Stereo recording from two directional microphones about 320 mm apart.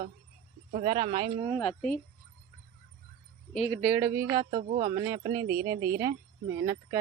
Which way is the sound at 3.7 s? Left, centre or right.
Centre.